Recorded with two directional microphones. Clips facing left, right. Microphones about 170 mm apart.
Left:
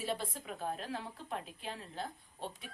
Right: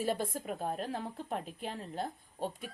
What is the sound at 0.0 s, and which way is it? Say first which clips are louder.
Speech: right 5 dB; 50° right (ahead or behind).